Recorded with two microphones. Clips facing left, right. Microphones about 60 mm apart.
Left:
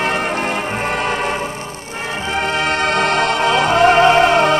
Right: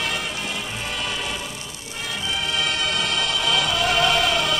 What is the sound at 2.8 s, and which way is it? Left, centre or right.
Music, left.